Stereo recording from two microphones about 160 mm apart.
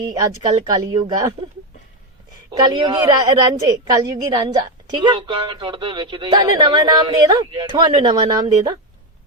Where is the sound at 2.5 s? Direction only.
25° right (ahead or behind).